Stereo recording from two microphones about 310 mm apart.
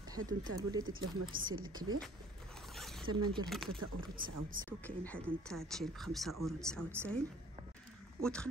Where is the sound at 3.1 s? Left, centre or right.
Centre.